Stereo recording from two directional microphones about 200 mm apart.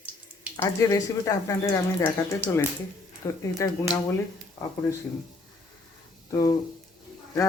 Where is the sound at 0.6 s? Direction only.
15° left (ahead or behind).